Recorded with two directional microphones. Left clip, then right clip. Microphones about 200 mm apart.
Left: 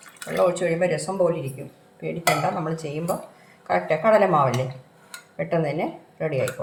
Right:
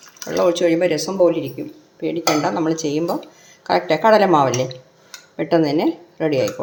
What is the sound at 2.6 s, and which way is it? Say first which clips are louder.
A woman's voice: right 7 dB; 45° right (ahead or behind).